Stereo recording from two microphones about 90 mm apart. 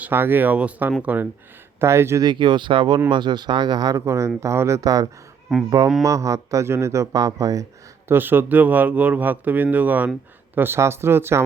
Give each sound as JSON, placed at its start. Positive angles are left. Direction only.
{"t": 0.0, "sound": "speech", "side_deg": -25}
{"t": 1.8, "sound": "speech", "side_deg": -30}
{"t": 2.2, "sound": "speech", "side_deg": -60}
{"t": 3.9, "sound": "speech", "side_deg": -35}
{"t": 5.5, "sound": "speech", "side_deg": 0}
{"t": 6.0, "sound": "speech", "side_deg": -35}
{"t": 8.0, "sound": "speech", "side_deg": -25}